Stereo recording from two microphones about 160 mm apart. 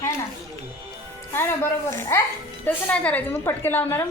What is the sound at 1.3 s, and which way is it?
A woman's voice, 15° left (ahead or behind).